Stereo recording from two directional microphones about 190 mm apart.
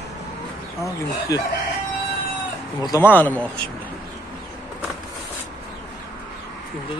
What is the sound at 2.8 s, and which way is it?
Speech, 15° left (ahead or behind).